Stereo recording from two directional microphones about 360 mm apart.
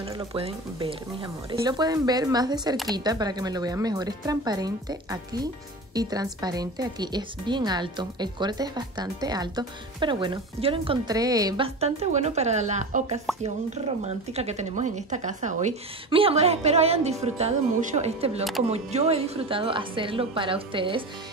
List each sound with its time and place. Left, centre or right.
0.0 s speech: centre